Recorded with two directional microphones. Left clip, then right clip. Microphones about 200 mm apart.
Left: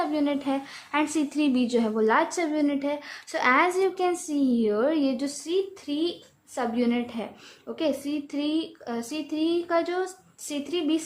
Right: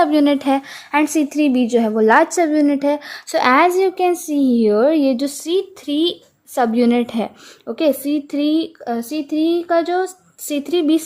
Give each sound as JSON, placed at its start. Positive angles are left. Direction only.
{"t": 0.0, "sound": "a woman's voice", "side_deg": -40}
{"t": 5.5, "sound": "a woman's voice", "side_deg": -45}